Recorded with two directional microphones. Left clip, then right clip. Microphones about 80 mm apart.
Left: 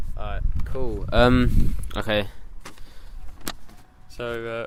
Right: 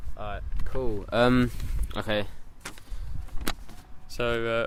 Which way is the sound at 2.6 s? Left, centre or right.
Right.